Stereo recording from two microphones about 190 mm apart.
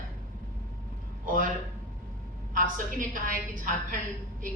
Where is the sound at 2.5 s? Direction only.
45° right (ahead or behind).